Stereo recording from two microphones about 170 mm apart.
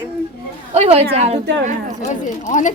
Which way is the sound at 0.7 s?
35° right (ahead or behind).